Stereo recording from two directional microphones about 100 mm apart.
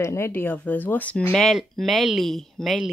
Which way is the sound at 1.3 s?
Centre (ahead or behind).